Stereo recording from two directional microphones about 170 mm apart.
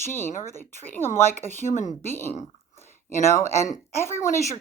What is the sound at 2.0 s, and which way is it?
Speech, 15° left (ahead or behind).